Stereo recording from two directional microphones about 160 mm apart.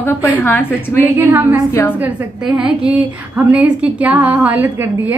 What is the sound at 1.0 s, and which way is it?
A woman's voice, 10° right (ahead or behind).